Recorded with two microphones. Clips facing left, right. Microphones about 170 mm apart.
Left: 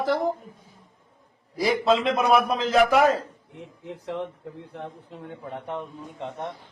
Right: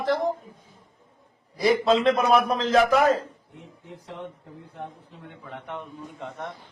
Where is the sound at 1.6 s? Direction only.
Centre (ahead or behind).